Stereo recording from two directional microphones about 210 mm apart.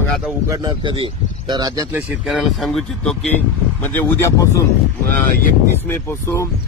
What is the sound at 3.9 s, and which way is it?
Speech, 10° left (ahead or behind).